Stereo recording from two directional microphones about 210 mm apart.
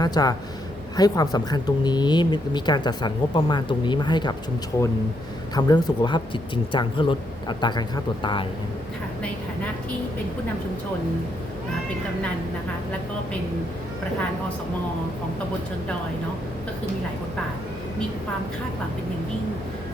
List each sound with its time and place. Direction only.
0.0 s speech: 20° left (ahead or behind)
5.5 s speech: 20° left (ahead or behind)